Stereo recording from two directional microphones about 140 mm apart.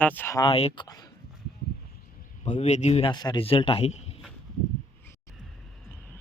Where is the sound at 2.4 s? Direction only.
55° left (ahead or behind).